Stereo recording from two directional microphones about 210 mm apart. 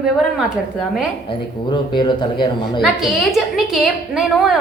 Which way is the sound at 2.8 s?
Centre (ahead or behind).